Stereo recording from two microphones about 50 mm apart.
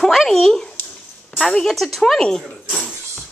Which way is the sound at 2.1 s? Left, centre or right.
Centre.